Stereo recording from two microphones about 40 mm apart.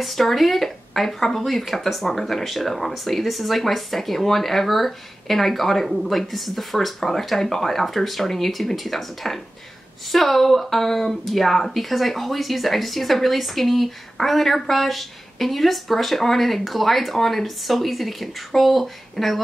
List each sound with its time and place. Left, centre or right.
0.0 s speech: centre